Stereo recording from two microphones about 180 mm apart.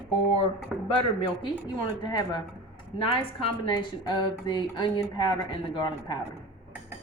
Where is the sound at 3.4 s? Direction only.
25° left (ahead or behind).